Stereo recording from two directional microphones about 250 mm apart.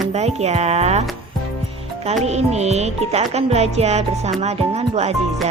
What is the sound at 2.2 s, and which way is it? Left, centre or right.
Speech, right.